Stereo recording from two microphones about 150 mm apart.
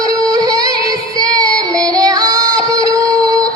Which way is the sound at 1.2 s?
25° right (ahead or behind).